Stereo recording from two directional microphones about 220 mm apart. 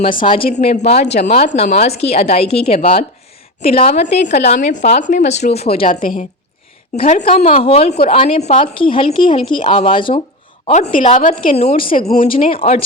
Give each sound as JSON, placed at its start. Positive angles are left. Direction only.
{"t": 0.3, "sound": "a woman's voice", "side_deg": 30}
{"t": 5.8, "sound": "a woman's voice", "side_deg": 40}
{"t": 6.9, "sound": "a woman's voice", "side_deg": 25}
{"t": 11.8, "sound": "a woman's voice", "side_deg": 40}
{"t": 12.3, "sound": "a woman's voice", "side_deg": 25}